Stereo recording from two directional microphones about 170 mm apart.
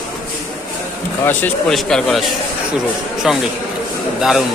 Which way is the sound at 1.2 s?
10° left (ahead or behind).